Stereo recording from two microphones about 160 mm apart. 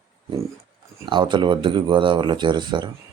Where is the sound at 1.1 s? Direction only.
30° right (ahead or behind).